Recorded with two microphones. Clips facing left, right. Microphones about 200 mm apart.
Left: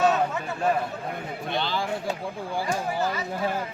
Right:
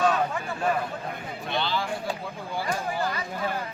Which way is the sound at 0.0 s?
20° left (ahead or behind).